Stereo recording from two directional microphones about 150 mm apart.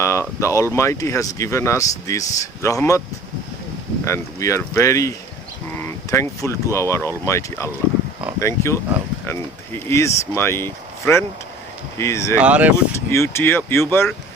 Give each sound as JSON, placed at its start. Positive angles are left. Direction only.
{"t": 0.0, "sound": "speech", "side_deg": 20}
{"t": 4.0, "sound": "speech", "side_deg": 20}
{"t": 12.4, "sound": "speech", "side_deg": -10}
{"t": 12.7, "sound": "speech", "side_deg": 15}